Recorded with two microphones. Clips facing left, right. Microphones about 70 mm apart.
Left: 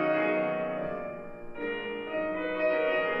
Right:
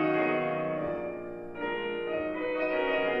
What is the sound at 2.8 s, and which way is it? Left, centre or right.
Music, centre.